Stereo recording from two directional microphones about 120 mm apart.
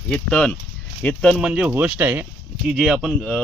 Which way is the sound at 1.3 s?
5° right (ahead or behind).